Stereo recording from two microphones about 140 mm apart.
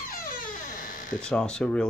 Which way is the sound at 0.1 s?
85° left.